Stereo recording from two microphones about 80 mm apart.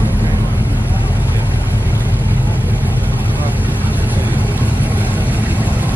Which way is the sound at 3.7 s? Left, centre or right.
Left.